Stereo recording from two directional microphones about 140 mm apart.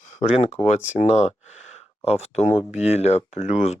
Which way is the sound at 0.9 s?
50° left (ahead or behind).